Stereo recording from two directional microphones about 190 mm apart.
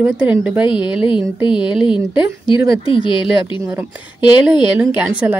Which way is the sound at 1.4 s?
25° left (ahead or behind).